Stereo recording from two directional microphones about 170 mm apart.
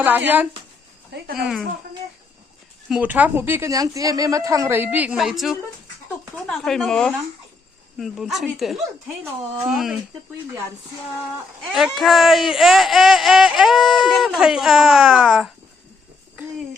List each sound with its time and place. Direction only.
1.1 s speech: 75° right (ahead or behind)
2.9 s a woman's voice: 10° right (ahead or behind)
11.7 s speech: centre (ahead or behind)